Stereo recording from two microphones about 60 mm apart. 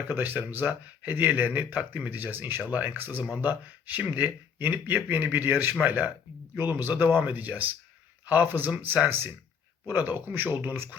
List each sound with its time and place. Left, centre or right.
0.0 s speech: right